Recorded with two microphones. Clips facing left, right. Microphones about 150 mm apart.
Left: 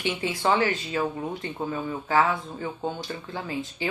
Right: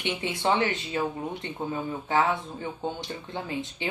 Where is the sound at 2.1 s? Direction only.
20° right (ahead or behind).